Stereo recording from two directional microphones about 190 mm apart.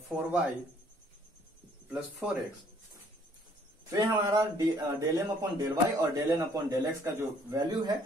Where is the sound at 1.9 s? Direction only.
Centre (ahead or behind).